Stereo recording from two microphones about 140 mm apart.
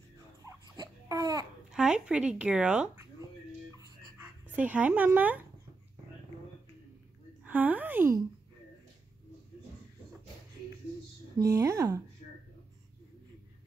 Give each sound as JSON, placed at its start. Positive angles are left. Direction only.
{"t": 0.4, "sound": "babbling", "side_deg": -25}
{"t": 1.7, "sound": "speech", "side_deg": -5}
{"t": 4.2, "sound": "speech", "side_deg": -10}
{"t": 7.4, "sound": "a woman's voice", "side_deg": -10}
{"t": 11.3, "sound": "speech", "side_deg": -25}